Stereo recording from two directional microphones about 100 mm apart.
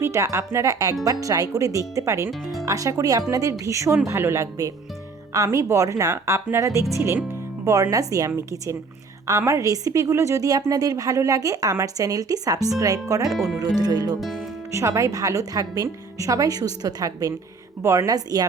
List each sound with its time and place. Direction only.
0.0 s a woman's voice: 30° right (ahead or behind)
9.5 s a woman's voice: 35° right (ahead or behind)
13.3 s speech: centre (ahead or behind)
13.7 s a woman's voice: 40° right (ahead or behind)
14.2 s speech: centre (ahead or behind)
14.7 s a woman's voice: 30° right (ahead or behind)